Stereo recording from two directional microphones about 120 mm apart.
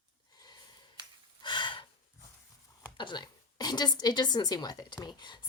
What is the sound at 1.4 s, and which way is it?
Gasp, 40° left (ahead or behind).